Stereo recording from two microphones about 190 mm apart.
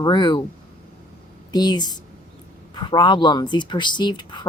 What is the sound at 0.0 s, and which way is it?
Speech, 25° left (ahead or behind).